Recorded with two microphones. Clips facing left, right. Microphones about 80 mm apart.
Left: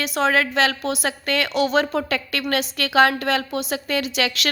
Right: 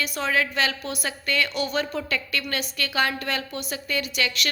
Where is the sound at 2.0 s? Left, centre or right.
Left.